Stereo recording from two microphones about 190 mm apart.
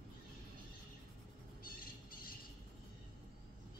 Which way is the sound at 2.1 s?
50° left (ahead or behind).